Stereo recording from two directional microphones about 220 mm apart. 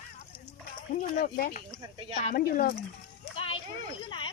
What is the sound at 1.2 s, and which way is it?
Speech, 40° left (ahead or behind).